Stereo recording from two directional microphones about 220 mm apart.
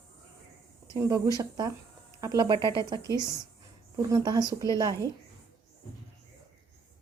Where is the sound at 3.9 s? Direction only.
15° right (ahead or behind).